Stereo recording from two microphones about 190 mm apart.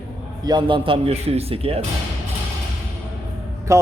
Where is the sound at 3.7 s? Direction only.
15° right (ahead or behind).